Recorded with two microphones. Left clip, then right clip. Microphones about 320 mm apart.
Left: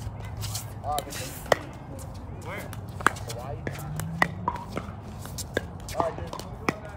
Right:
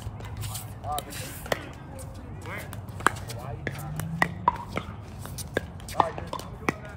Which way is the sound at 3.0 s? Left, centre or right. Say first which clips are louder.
Left 1 dB; centre.